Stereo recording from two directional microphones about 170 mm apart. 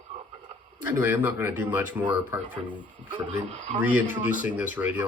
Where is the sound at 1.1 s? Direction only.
10° right (ahead or behind).